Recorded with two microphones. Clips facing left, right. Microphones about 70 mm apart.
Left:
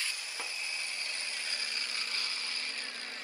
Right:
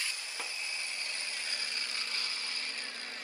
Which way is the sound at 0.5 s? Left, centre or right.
Right.